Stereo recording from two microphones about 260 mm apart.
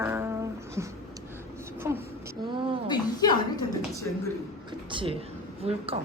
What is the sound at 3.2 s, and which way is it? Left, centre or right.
Speech, centre.